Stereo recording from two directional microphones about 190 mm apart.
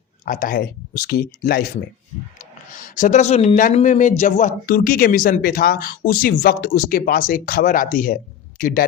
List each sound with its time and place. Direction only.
0.3 s speech: 45° left (ahead or behind)